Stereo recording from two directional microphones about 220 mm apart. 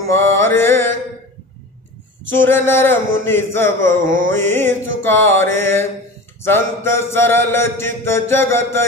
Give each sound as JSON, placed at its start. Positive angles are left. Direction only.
{"t": 0.0, "sound": "mantra", "side_deg": 10}
{"t": 2.3, "sound": "mantra", "side_deg": 10}
{"t": 4.0, "sound": "music", "side_deg": -35}
{"t": 4.3, "sound": "mantra", "side_deg": 10}